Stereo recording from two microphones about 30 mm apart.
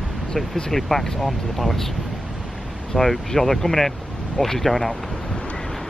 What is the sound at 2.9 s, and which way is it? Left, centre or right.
Speech, centre.